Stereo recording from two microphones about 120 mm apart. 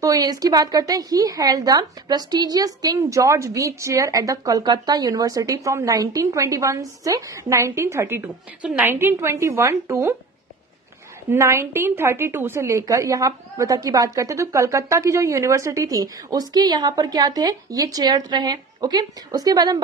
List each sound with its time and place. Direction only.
0.0 s a woman's voice: 30° right (ahead or behind)
11.2 s a woman's voice: 25° right (ahead or behind)